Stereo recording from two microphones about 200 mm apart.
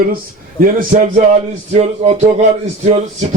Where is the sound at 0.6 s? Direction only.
40° right (ahead or behind).